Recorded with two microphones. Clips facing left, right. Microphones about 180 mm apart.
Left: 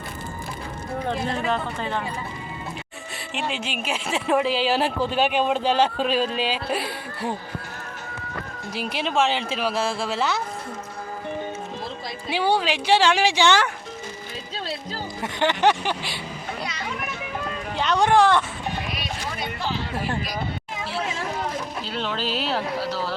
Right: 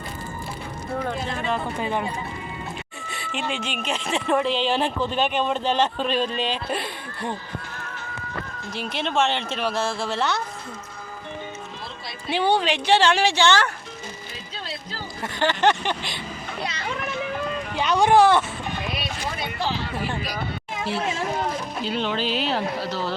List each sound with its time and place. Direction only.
1.8 s speech: 15° right (ahead or behind)
3.1 s a woman's voice: centre (ahead or behind)
8.7 s a woman's voice: 10° left (ahead or behind)
12.3 s a woman's voice: 10° left (ahead or behind)
15.2 s a woman's voice: 15° left (ahead or behind)
17.7 s speech: centre (ahead or behind)
21.8 s speech: centre (ahead or behind)